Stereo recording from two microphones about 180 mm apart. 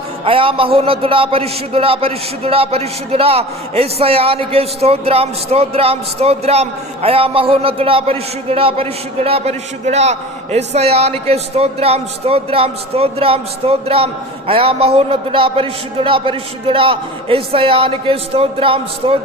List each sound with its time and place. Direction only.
0.3 s a man's voice: 30° right (ahead or behind)